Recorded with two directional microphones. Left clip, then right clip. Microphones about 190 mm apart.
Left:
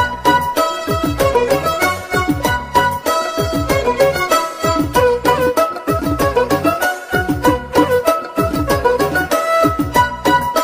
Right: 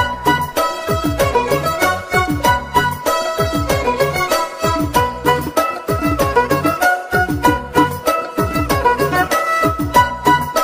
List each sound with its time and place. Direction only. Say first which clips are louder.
0.0 s music: left 2 dB; centre (ahead or behind)